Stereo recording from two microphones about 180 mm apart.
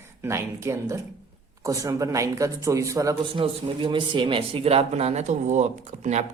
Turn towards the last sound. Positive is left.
turn(degrees=-40)  # may be behind; listen again after turning